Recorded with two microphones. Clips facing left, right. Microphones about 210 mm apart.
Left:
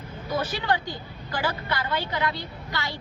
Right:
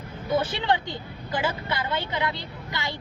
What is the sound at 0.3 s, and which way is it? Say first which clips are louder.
A woman's voice: right 2 dB; 25° right (ahead or behind).